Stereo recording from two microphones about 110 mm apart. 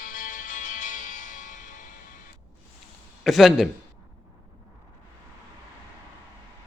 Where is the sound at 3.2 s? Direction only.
5° right (ahead or behind).